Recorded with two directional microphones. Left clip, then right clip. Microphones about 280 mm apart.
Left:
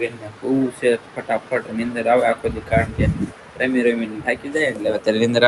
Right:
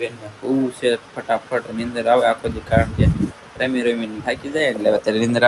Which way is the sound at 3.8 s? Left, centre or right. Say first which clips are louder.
Left 2 dB; centre.